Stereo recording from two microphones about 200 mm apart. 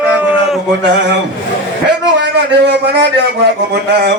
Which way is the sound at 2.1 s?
60° right (ahead or behind).